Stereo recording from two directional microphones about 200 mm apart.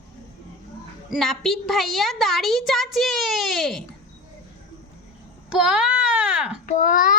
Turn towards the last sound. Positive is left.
turn(degrees=40)  # may be behind; listen again after turning